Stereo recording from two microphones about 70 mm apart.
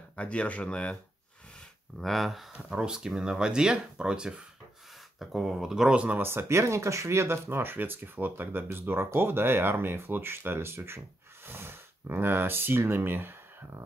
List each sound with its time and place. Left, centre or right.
0.1 s speech: centre
2.0 s speech: centre
2.5 s speech: centre
6.1 s speech: right